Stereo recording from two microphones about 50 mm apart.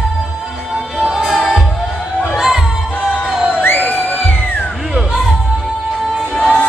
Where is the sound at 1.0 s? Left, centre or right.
Centre.